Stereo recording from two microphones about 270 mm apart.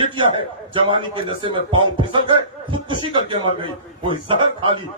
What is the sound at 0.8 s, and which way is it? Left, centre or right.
A man's voice, centre.